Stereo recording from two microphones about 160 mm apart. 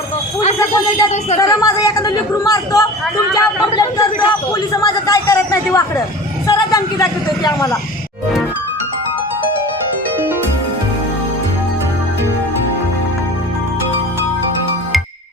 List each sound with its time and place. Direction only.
0.6 s a man's voice: 20° left (ahead or behind)